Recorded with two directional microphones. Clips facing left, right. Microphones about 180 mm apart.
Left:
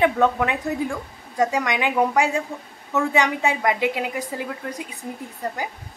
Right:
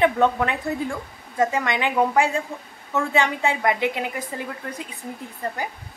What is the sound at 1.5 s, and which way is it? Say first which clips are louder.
A woman's voice: left 1 dB; 15° left (ahead or behind).